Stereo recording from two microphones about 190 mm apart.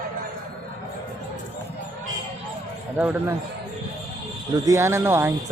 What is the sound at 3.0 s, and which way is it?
Speech, 5° right (ahead or behind).